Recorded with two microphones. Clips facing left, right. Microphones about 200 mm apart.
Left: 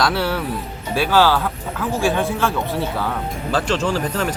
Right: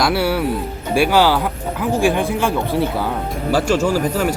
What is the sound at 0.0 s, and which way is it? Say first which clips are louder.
Speech: right 3 dB; 10° right (ahead or behind).